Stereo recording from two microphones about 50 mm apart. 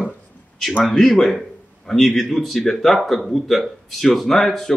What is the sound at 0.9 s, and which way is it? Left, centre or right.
Speech, centre.